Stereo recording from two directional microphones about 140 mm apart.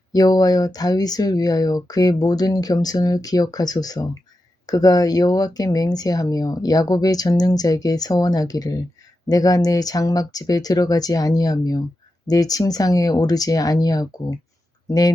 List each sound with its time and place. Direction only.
0.1 s speech: 25° left (ahead or behind)